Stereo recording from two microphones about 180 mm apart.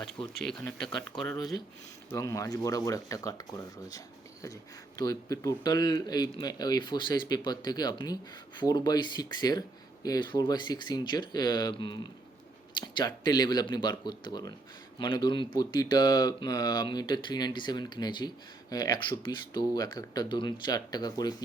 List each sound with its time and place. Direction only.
0.4 s speech: 5° left (ahead or behind)
2.0 s a man's voice: 20° left (ahead or behind)